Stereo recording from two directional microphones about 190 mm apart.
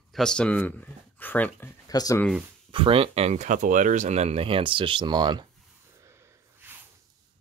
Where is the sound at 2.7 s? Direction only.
25° right (ahead or behind).